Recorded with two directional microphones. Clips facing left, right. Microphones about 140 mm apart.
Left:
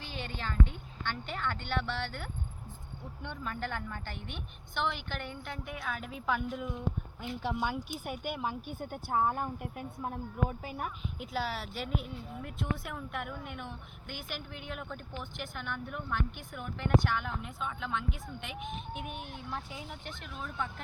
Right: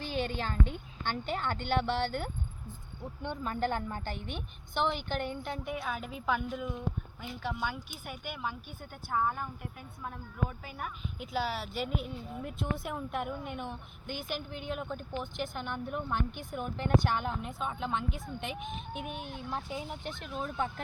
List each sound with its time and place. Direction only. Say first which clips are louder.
0.0 s a sound: right 6 dB; 40° right (ahead or behind)
1.0 s a woman's voice: right 3 dB; 30° right (ahead or behind)
5.7 s a woman's voice: right 2 dB; 15° right (ahead or behind)
7.3 s speech: left 2 dB; 15° left (ahead or behind)
9.1 s speech: left 1 dB; 30° left (ahead or behind)
11.2 s speech: right 2 dB; centre (ahead or behind); by 18.5 s 35° right (ahead or behind)
18.9 s speech: right 2 dB; 25° right (ahead or behind)